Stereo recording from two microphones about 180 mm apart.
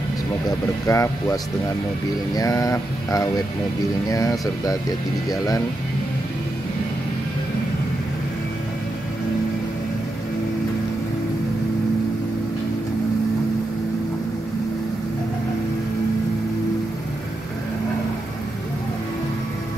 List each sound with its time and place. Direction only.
0.8 s speech: 15° left (ahead or behind)